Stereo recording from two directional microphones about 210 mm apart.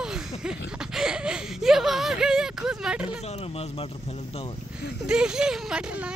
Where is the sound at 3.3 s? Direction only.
30° left (ahead or behind).